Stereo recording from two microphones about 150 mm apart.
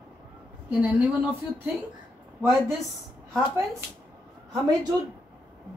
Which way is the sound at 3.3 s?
15° right (ahead or behind).